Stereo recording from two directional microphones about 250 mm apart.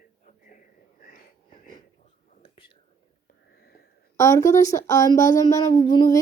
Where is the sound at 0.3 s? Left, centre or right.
Left.